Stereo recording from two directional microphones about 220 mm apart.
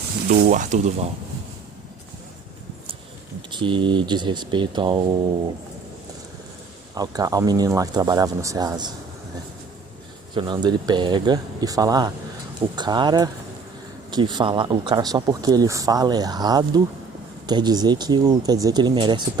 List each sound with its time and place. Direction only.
0.3 s speech: 35° right (ahead or behind)
3.5 s speech: 20° right (ahead or behind)
6.9 s speech: 15° right (ahead or behind)
10.3 s speech: 20° right (ahead or behind)